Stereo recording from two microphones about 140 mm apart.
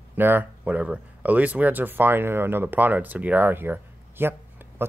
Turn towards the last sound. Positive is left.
turn(degrees=-15)  # may be behind; listen again after turning